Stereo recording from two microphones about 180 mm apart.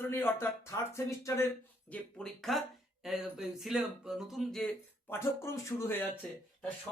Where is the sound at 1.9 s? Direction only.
5° left (ahead or behind).